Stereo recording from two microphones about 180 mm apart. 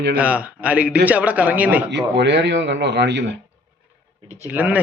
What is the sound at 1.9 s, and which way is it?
Speech, 75° right (ahead or behind).